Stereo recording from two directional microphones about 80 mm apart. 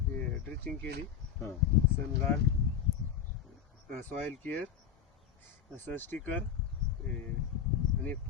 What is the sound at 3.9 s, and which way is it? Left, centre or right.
Speech, centre.